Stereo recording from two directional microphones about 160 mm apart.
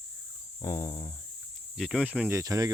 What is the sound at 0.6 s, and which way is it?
Speech, 20° left (ahead or behind).